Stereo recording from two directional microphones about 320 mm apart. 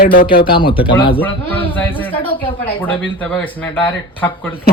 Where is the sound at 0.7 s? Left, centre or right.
Centre.